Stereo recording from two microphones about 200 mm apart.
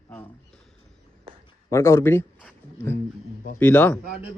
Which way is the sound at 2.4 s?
10° left (ahead or behind).